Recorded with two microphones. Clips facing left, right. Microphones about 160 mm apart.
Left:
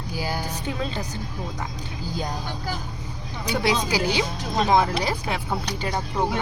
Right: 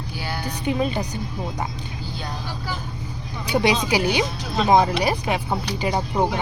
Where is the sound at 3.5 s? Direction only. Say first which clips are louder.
Right 3 dB; 15° right (ahead or behind).